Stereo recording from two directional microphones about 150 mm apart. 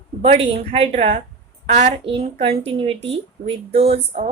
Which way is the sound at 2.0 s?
40° right (ahead or behind).